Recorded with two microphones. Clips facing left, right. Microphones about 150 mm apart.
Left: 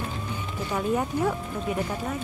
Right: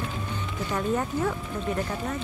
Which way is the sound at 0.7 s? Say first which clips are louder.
Left 1 dB; 10° left (ahead or behind).